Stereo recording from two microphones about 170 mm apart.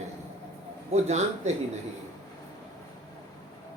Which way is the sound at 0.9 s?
40° right (ahead or behind).